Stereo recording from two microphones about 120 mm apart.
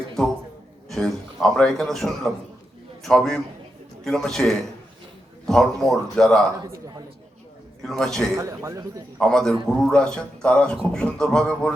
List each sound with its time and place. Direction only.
0.2 s a man's voice: 5° left (ahead or behind)
6.5 s a man's voice: 35° right (ahead or behind)
7.8 s speech: 5° left (ahead or behind)
8.4 s a man's voice: 25° right (ahead or behind)
9.1 s a man's voice: 5° left (ahead or behind)